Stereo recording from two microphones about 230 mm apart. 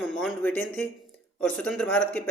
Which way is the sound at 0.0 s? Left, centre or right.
Centre.